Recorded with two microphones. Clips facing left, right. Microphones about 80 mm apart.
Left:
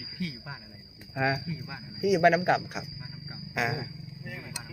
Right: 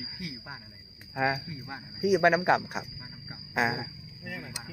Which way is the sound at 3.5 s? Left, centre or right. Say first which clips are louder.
Right 2 dB; right.